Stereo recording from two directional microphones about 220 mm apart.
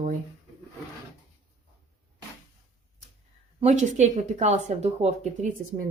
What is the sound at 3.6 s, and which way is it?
Speech, 35° right (ahead or behind).